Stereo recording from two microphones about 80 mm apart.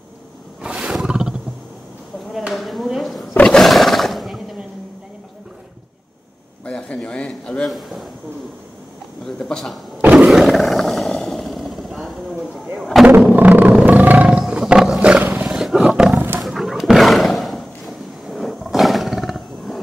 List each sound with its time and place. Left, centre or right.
0.6 s wild animals: centre
2.3 s speech: centre
3.3 s roar: centre
6.6 s a sound: centre
9.2 s a sound: centre
10.1 s roar: centre
12.7 s artillery fire: centre
13.2 s music: centre
14.4 s wild animals: centre
15.6 s roar: centre
16.3 s roaring cats: centre